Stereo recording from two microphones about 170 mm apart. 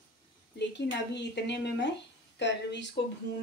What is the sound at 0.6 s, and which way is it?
Speech, 90° left.